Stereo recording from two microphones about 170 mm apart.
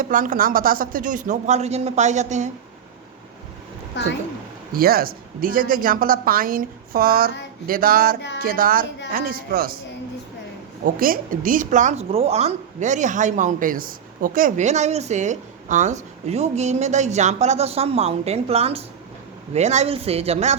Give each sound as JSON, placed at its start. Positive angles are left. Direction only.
{"t": 0.0, "sound": "a woman's voice", "side_deg": -50}
{"t": 3.9, "sound": "speech", "side_deg": 90}
{"t": 4.7, "sound": "a woman's voice", "side_deg": -60}
{"t": 10.8, "sound": "a woman's voice", "side_deg": -55}